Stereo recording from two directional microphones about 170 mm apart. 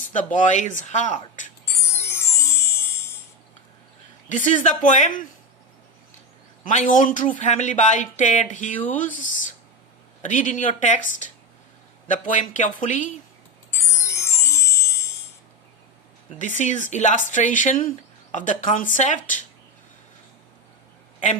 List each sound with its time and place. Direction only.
0.1 s speech: 50° left (ahead or behind)
1.9 s music: 15° left (ahead or behind)
4.3 s speech: 50° left (ahead or behind)
6.7 s speech: 50° left (ahead or behind)
10.2 s speech: 50° left (ahead or behind)
13.7 s music: 15° left (ahead or behind)
16.6 s speech: 45° left (ahead or behind)